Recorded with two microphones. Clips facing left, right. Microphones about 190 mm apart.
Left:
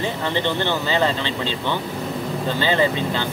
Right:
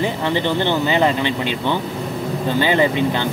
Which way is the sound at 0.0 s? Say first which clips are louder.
Right 3 dB; 15° right (ahead or behind).